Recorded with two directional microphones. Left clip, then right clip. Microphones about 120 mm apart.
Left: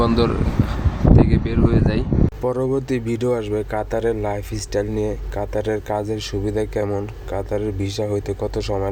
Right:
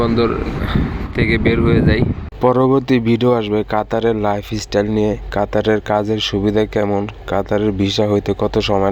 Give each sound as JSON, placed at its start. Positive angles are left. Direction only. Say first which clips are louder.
{"t": 1.1, "sound": "speech", "louder": "right 5 dB", "side_deg": -30}
{"t": 2.4, "sound": "speech", "louder": "right 11 dB", "side_deg": -40}